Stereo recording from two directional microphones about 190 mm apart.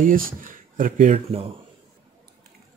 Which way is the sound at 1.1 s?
30° right (ahead or behind).